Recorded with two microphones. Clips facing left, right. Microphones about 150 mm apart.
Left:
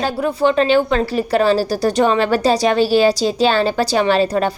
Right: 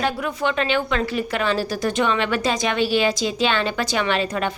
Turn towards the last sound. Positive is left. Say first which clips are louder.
# left 7 dB
turn(degrees=35)  # may be behind; listen again after turning